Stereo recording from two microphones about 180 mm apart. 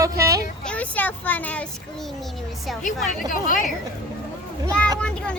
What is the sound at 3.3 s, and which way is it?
Speech, 45° left (ahead or behind).